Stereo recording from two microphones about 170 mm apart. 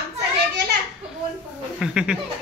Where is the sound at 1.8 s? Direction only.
5° right (ahead or behind).